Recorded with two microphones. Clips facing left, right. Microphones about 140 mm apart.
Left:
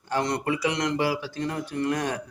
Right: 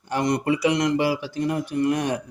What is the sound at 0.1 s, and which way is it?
Speech, 15° right (ahead or behind).